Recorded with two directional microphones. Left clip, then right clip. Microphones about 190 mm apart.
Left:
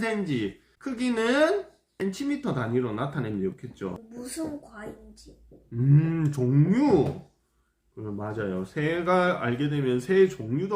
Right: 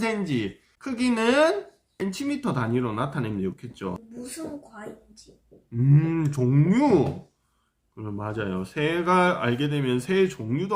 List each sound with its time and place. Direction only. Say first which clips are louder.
0.0 s speech: right 1 dB; 45° right (ahead or behind)
3.9 s speech: left 1 dB; 5° left (ahead or behind)
5.7 s speech: right 2 dB; 30° right (ahead or behind)